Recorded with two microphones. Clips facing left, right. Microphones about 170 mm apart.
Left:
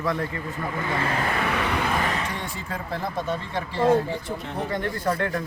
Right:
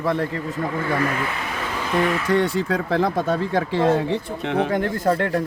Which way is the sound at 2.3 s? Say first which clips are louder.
Right 13 dB; 80° right.